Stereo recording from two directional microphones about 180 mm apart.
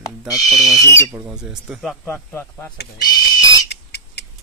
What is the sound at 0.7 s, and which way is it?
Speech, 15° left (ahead or behind).